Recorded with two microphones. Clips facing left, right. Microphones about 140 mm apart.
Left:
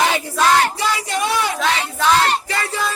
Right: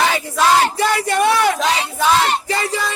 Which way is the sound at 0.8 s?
55° right (ahead or behind).